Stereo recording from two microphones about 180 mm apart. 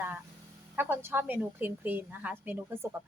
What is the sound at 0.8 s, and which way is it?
A woman's voice, 10° right (ahead or behind).